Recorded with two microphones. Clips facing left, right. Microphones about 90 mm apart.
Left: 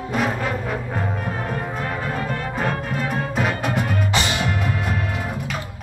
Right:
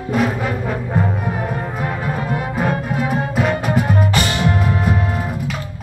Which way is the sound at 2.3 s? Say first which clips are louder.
Right 4 dB; 5° right (ahead or behind).